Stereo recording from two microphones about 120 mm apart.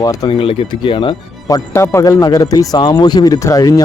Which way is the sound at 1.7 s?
25° left (ahead or behind).